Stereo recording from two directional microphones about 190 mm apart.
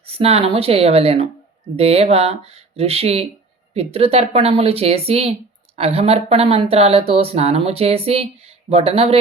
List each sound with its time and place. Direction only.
0.0 s speech: 30° right (ahead or behind)